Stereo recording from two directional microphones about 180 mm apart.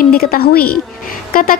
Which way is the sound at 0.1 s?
60° left (ahead or behind).